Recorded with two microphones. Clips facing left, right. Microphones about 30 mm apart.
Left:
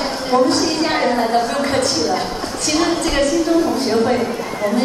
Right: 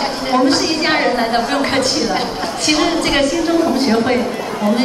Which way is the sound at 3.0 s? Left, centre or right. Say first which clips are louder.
Right 2 dB; right.